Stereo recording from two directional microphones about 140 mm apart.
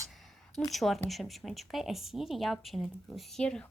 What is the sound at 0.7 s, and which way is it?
A woman's voice, centre (ahead or behind).